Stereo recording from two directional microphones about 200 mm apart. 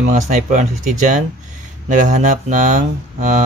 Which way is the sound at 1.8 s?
40° right (ahead or behind).